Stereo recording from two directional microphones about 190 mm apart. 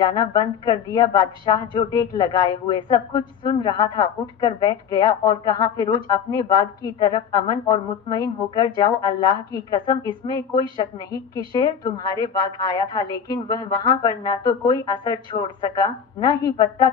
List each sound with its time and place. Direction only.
0.1 s a woman's voice: 20° left (ahead or behind)